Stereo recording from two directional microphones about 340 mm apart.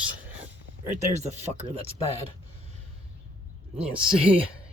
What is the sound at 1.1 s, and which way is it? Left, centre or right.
Speech, centre.